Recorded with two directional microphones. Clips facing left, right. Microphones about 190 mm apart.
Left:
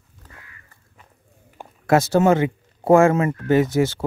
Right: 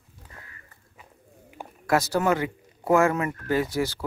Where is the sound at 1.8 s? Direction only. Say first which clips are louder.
Left 7 dB; 25° left (ahead or behind).